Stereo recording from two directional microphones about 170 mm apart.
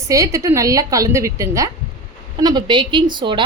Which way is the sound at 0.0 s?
20° right (ahead or behind).